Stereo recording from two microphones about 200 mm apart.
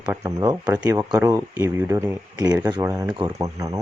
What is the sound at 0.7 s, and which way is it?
Speech, 5° right (ahead or behind).